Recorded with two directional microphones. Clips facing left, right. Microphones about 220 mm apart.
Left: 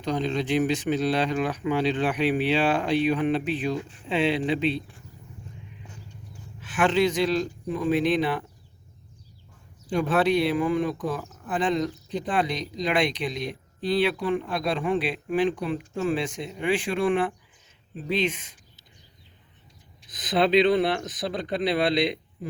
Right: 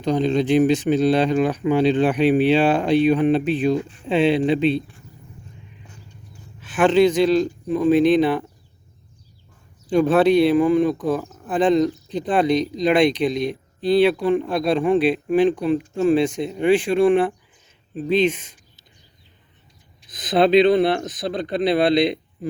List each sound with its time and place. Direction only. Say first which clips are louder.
0.0 s speech: right 7 dB; 25° right (ahead or behind)
6.7 s speech: right 7 dB; 25° right (ahead or behind)
9.9 s speech: right 7 dB; 30° right (ahead or behind)
18.3 s speech: right 8 dB; 45° right (ahead or behind)
20.3 s speech: right 5 dB; 30° right (ahead or behind)